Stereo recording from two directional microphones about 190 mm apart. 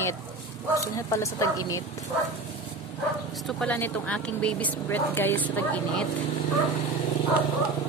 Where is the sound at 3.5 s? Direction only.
5° left (ahead or behind).